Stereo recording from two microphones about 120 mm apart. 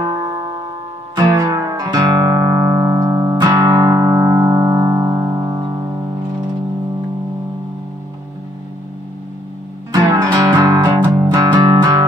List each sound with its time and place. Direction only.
1.1 s music: 30° right (ahead or behind)
9.9 s music: 35° right (ahead or behind)